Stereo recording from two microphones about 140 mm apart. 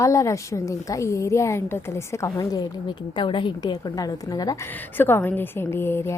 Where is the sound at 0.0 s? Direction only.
20° left (ahead or behind).